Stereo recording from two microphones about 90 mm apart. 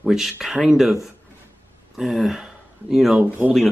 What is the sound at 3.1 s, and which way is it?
Speech, 20° right (ahead or behind).